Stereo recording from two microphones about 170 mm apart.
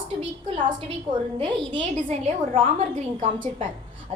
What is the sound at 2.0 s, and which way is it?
A woman's voice, 35° right (ahead or behind).